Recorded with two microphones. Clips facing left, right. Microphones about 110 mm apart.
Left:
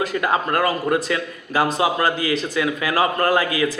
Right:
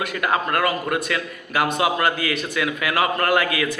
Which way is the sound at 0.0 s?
30° left (ahead or behind).